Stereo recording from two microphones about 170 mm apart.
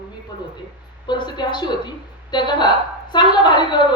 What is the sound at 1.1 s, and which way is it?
A woman's voice, 25° left (ahead or behind).